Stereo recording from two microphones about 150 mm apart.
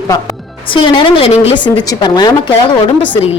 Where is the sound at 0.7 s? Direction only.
30° left (ahead or behind).